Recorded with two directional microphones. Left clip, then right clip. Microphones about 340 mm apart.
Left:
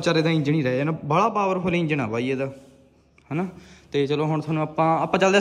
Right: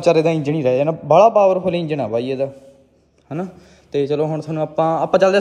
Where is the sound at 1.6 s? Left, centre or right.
Centre.